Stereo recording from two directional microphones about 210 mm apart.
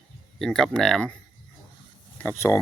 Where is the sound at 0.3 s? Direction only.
Centre (ahead or behind).